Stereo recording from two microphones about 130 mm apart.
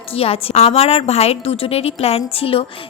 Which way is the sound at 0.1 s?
50° left (ahead or behind).